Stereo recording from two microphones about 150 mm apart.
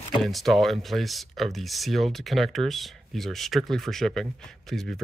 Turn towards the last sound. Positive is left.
turn(degrees=0)  # may be behind; listen again after turning